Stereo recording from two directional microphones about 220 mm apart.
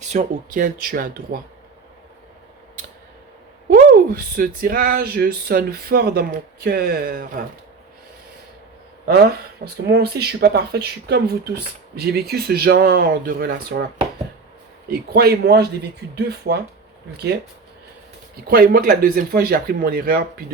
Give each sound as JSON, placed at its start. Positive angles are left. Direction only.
{"t": 0.0, "sound": "speech", "side_deg": -35}
{"t": 3.7, "sound": "speech", "side_deg": -40}
{"t": 9.8, "sound": "speech", "side_deg": -45}
{"t": 14.8, "sound": "speech", "side_deg": -45}
{"t": 18.4, "sound": "speech", "side_deg": -40}